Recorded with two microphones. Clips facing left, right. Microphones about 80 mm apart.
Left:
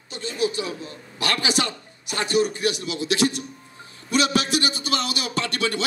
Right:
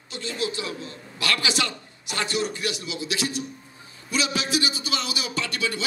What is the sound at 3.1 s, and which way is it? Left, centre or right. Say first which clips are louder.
A man's voice: left 7 dB; left.